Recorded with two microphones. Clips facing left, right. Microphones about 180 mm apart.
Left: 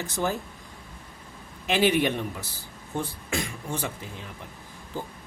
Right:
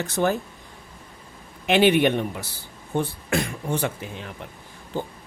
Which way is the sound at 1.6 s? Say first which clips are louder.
Right 5 dB; 65° right (ahead or behind).